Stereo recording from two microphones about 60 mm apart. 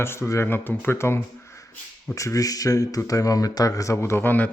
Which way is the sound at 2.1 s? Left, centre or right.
Left.